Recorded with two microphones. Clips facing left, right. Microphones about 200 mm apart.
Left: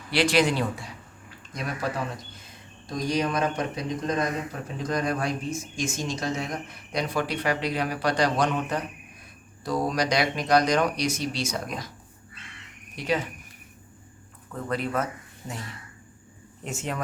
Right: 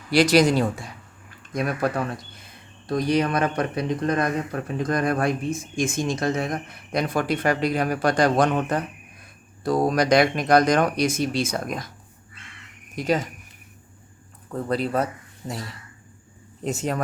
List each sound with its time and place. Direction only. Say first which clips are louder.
0.1 s speech: right 5 dB; 40° right (ahead or behind)
1.5 s speech: right 6 dB; 55° right (ahead or behind)
13.0 s speech: right 4 dB; 40° right (ahead or behind)
14.5 s speech: right 4 dB; 35° right (ahead or behind)
16.6 s speech: right 6 dB; 40° right (ahead or behind)